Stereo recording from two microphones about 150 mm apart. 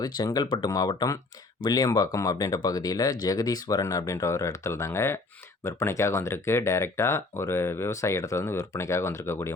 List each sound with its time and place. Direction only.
0.0 s speech: 30° left (ahead or behind)